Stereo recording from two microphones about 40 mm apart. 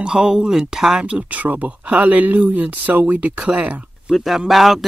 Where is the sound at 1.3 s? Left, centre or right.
Right.